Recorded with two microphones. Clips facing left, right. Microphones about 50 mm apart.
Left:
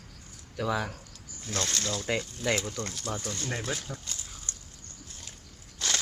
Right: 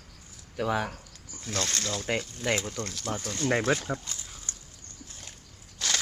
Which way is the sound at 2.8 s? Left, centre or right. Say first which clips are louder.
Right 1 dB; centre.